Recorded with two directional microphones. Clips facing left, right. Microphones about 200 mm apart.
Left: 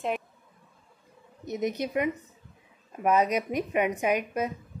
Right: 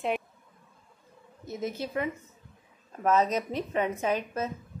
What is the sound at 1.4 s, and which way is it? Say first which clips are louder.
A woman's voice: left 4 dB; 20° left (ahead or behind).